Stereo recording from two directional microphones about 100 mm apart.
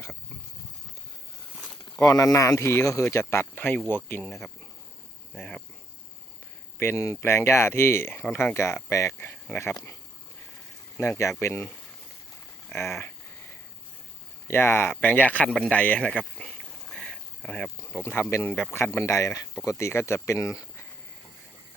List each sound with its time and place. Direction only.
2.0 s speech: 35° left (ahead or behind); by 4.3 s 20° left (ahead or behind)
4.3 s speech: 5° left (ahead or behind)
6.7 s speech: 25° left (ahead or behind)
12.8 s speech: centre (ahead or behind)
14.4 s speech: 25° left (ahead or behind)
16.6 s a sound: 5° left (ahead or behind)
17.9 s speech: 20° left (ahead or behind)